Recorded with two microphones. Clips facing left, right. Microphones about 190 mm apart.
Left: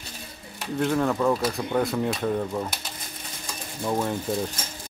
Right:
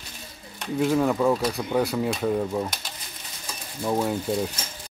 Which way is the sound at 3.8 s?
5° right (ahead or behind).